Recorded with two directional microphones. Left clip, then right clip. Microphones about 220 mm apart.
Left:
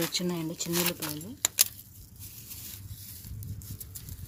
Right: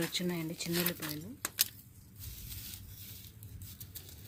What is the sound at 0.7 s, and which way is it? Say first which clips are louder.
Speech: left 5 dB; 25° left (ahead or behind).